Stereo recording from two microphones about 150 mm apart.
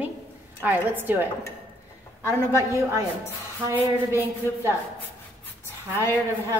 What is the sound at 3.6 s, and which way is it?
A woman's voice, 15° right (ahead or behind).